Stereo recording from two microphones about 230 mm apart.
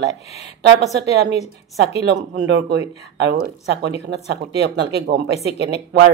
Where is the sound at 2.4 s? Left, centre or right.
Right.